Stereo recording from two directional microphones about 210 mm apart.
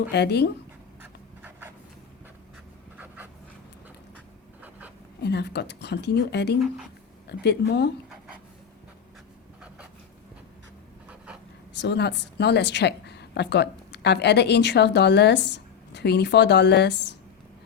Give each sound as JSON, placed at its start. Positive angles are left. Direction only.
{"t": 0.1, "sound": "a woman's voice", "side_deg": 50}
{"t": 1.4, "sound": "a sound", "side_deg": -10}
{"t": 5.2, "sound": "a woman's voice", "side_deg": 55}
{"t": 6.6, "sound": "speech", "side_deg": 0}
{"t": 7.4, "sound": "a woman's voice", "side_deg": 50}
{"t": 11.8, "sound": "a woman's voice", "side_deg": 55}